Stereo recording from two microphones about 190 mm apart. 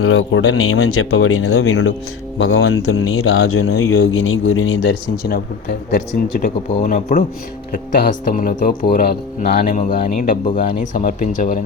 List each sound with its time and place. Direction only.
0.0 s speech: 90° left; by 6.0 s 50° left (ahead or behind)
6.4 s speech: 40° left (ahead or behind)